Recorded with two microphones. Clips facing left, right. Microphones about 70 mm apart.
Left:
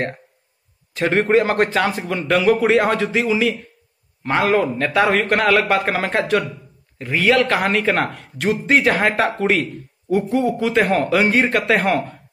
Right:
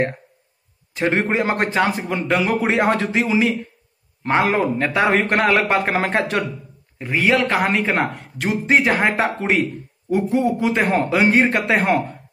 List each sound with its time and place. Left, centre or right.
0.9 s a man's voice: centre
2.7 s a man's voice: right